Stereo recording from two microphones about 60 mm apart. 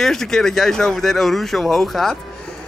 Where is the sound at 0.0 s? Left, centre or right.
Centre.